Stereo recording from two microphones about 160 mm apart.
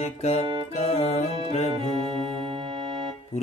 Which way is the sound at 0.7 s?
40° left (ahead or behind).